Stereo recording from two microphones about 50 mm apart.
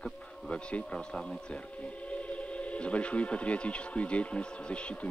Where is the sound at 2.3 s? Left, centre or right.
Left.